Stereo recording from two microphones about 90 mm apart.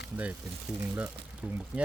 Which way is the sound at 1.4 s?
10° right (ahead or behind).